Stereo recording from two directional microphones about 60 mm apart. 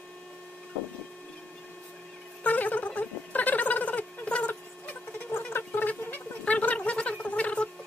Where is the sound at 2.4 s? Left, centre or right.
Left.